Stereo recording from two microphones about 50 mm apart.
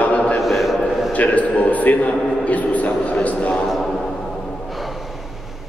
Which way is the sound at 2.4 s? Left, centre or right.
Left.